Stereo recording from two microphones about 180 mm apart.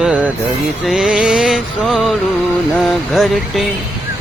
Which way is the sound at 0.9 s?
5° right (ahead or behind).